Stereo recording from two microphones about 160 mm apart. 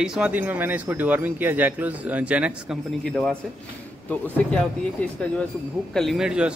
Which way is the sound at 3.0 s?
Centre (ahead or behind).